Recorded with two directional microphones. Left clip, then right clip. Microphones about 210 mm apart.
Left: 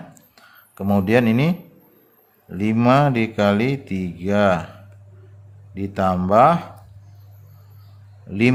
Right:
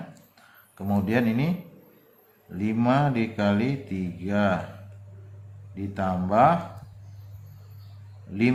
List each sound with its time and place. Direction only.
0.3 s speech: 50° left (ahead or behind)
2.6 s speech: 50° left (ahead or behind)
5.7 s speech: 45° left (ahead or behind)
8.3 s speech: 45° left (ahead or behind)